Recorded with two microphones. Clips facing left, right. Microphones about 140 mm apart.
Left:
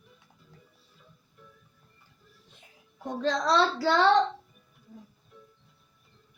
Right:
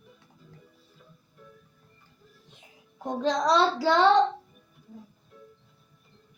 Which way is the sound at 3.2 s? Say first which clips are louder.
Right 2 dB; 15° right (ahead or behind).